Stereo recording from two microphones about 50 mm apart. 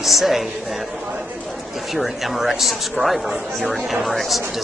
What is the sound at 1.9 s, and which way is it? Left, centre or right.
Speech, centre.